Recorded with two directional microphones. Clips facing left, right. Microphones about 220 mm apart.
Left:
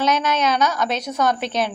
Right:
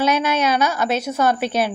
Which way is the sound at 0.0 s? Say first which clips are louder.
Right 1 dB; 10° right (ahead or behind).